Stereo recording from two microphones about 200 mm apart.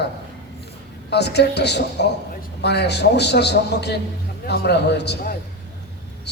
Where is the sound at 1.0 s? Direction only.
55° left (ahead or behind).